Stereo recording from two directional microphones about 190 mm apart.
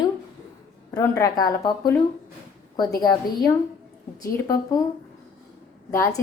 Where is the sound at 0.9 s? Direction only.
15° left (ahead or behind).